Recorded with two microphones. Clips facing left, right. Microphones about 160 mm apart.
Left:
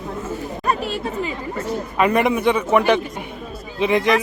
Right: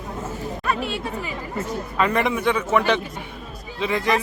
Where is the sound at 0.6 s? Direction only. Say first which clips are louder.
Left 3 dB; 40° left (ahead or behind).